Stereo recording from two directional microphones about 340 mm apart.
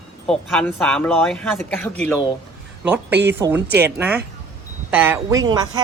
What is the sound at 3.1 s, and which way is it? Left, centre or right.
Speech, right.